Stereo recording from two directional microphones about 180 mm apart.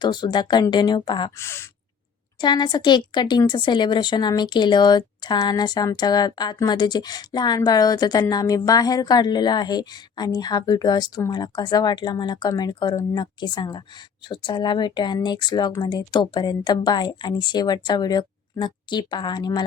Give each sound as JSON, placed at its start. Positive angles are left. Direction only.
{"t": 0.0, "sound": "a woman's voice", "side_deg": 25}